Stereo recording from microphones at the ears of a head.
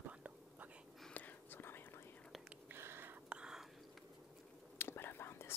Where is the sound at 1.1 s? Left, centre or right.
Left.